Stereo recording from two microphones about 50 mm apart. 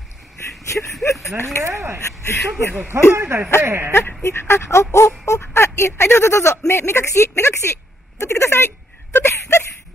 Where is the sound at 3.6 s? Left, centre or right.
Right.